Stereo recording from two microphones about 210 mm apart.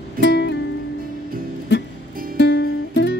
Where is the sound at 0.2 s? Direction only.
55° left (ahead or behind).